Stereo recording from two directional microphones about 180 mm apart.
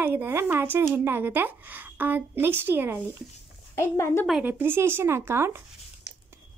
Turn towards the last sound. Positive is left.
turn(degrees=-15)  # may be behind; listen again after turning